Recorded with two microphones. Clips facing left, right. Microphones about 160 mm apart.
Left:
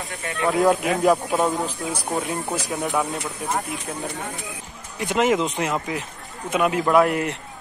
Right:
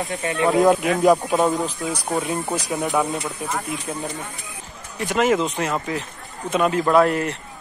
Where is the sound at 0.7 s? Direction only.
Centre (ahead or behind).